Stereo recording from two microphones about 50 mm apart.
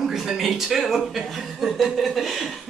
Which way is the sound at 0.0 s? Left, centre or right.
Centre.